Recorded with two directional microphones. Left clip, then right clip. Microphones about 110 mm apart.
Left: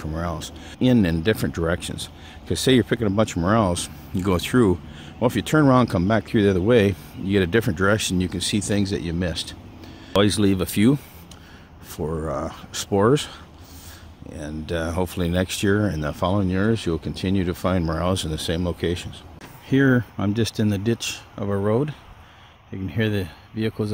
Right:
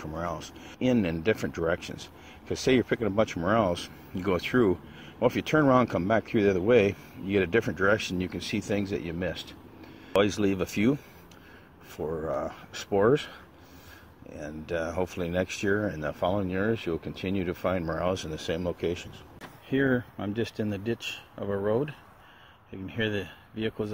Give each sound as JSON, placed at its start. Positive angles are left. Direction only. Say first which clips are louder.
{"t": 0.0, "sound": "speech", "louder": "left 4 dB", "side_deg": 15}
{"t": 19.7, "sound": "speech", "louder": "left 7 dB", "side_deg": 50}
{"t": 21.5, "sound": "speech", "louder": "left 5 dB", "side_deg": 30}